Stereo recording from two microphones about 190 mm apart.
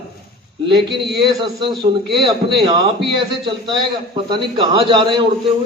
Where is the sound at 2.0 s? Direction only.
Centre (ahead or behind).